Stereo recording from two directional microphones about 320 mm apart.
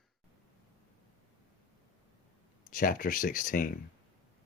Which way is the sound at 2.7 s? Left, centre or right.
Left.